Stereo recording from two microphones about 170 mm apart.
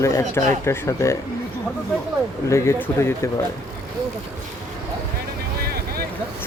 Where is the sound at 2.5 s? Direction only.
15° left (ahead or behind).